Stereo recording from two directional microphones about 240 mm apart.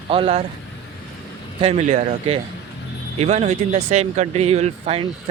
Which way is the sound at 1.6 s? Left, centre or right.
Right.